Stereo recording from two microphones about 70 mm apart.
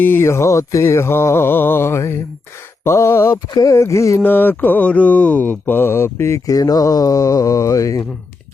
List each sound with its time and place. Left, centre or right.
0.0 s mantra: left
3.6 s a sound: left
4.2 s mantra: left
6.5 s speech: left